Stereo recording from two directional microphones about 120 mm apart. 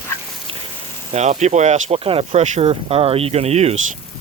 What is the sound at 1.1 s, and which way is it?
Speech, 70° right (ahead or behind).